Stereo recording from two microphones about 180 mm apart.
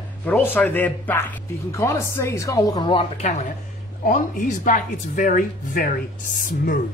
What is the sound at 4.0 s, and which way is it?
Speech, 45° left (ahead or behind).